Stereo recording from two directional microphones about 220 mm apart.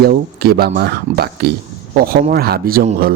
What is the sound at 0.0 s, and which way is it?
Speech, 45° right (ahead or behind).